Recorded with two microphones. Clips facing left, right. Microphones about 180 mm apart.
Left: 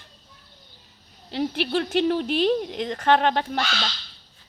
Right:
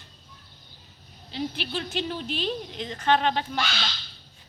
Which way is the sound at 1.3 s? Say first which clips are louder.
Left 7 dB; 65° left (ahead or behind).